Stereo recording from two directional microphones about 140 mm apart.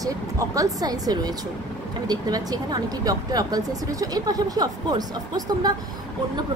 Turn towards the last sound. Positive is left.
turn(degrees=-30)  # may be behind; listen again after turning